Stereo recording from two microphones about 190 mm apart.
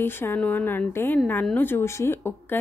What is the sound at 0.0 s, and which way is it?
A woman's voice, 10° left (ahead or behind).